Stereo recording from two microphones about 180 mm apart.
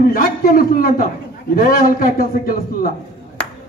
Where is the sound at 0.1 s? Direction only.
55° left (ahead or behind).